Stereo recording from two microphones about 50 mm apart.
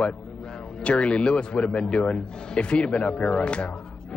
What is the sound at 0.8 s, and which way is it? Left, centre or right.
A man's voice, left.